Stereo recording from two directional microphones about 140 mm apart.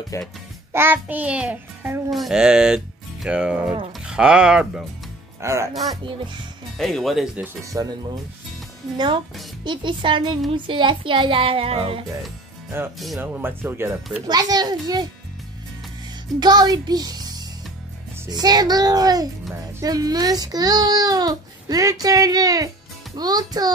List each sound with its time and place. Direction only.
0.1 s a child's voice: 25° left (ahead or behind)
0.7 s a child's voice: 15° right (ahead or behind)
2.0 s speech: centre (ahead or behind)
5.4 s a child's voice: 20° right (ahead or behind)
5.8 s child singing: 30° right (ahead or behind)
6.8 s speech: centre (ahead or behind)
7.7 s a child's voice: 25° right (ahead or behind)
8.9 s child singing: 35° right (ahead or behind)
13.2 s a child's voice: 15° right (ahead or behind)
14.2 s a child's voice: 30° right (ahead or behind)
16.3 s a child's voice: 30° right (ahead or behind)